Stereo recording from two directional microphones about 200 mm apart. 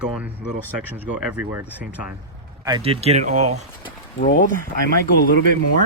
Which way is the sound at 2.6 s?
25° right (ahead or behind).